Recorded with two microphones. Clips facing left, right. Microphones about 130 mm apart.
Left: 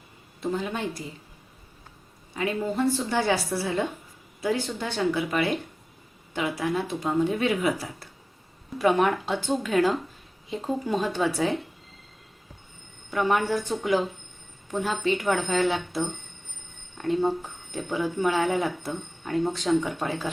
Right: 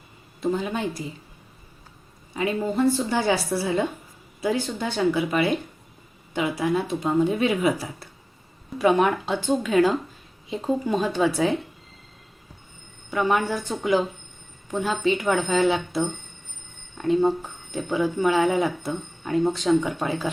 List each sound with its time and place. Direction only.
0.5 s speech: 10° right (ahead or behind)
2.7 s speech: 5° right (ahead or behind)
13.1 s speech: 5° right (ahead or behind)
17.0 s speech: 5° right (ahead or behind)